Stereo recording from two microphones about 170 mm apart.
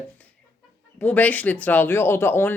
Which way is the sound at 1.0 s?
10° left (ahead or behind).